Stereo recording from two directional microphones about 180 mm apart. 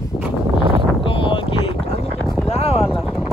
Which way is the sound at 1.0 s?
30° left (ahead or behind).